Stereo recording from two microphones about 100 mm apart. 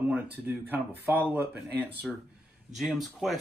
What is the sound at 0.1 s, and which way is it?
Speech, 20° right (ahead or behind).